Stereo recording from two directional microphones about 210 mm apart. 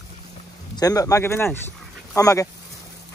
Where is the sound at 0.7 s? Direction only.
15° left (ahead or behind).